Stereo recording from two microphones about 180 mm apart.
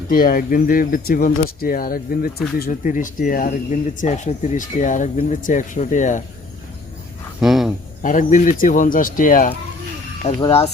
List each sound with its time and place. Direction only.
0.1 s speech: 55° left (ahead or behind)
7.4 s speech: centre (ahead or behind)
8.0 s speech: 45° left (ahead or behind)